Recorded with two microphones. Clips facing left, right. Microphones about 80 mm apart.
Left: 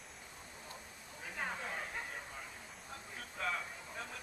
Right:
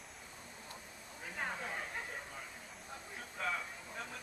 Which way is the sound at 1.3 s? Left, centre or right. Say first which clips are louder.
Even; centre.